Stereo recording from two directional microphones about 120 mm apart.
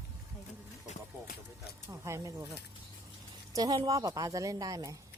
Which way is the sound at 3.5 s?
30° right (ahead or behind).